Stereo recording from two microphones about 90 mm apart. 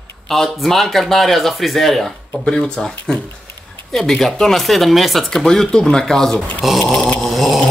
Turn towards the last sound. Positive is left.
turn(degrees=0)  # may be behind; listen again after turning